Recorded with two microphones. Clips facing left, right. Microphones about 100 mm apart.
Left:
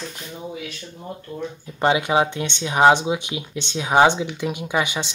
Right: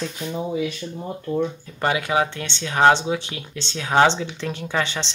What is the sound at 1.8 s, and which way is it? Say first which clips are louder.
Speech: left 3 dB; 20° left (ahead or behind).